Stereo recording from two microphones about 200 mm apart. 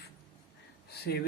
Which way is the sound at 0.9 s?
55° left (ahead or behind).